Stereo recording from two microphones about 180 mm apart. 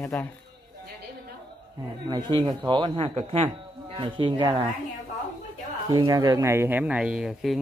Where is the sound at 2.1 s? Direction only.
25° right (ahead or behind).